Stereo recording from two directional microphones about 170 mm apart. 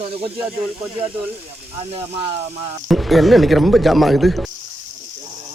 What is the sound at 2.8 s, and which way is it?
Speech, centre (ahead or behind).